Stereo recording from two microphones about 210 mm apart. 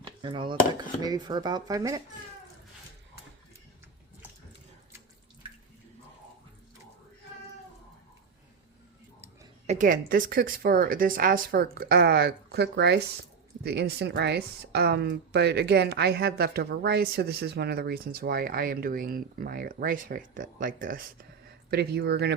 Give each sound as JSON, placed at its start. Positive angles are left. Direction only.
{"t": 0.0, "sound": "speech", "side_deg": -25}
{"t": 9.6, "sound": "a woman's voice", "side_deg": -35}